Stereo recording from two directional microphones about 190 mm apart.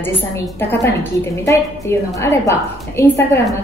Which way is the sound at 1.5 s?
15° left (ahead or behind).